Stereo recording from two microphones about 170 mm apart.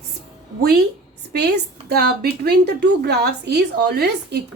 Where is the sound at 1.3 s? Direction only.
75° right (ahead or behind).